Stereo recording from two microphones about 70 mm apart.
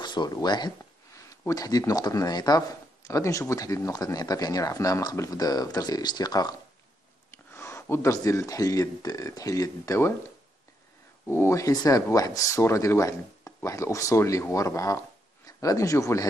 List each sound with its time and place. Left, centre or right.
0.0 s speech: left
1.5 s speech: left
3.0 s speech: left
5.4 s speech: left
7.2 s a sound: left
7.9 s speech: left
9.0 s speech: left
11.2 s speech: left
11.7 s speech: left